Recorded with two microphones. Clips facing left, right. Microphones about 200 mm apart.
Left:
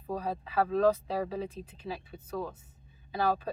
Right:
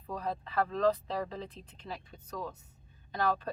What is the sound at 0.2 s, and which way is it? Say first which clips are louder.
Speech: left 1 dB; 10° left (ahead or behind).